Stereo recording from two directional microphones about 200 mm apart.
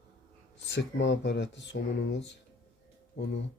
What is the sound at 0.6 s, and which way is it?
Speech, 60° left (ahead or behind).